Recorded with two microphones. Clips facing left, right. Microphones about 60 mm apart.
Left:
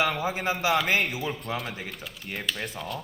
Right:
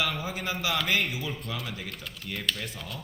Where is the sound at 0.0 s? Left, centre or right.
Left.